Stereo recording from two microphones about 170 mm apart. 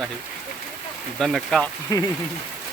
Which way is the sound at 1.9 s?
20° left (ahead or behind).